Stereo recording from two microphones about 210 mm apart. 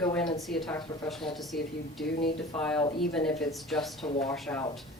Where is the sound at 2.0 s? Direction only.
50° left (ahead or behind).